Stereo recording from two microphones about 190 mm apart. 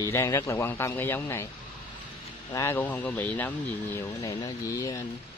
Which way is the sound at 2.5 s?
15° left (ahead or behind).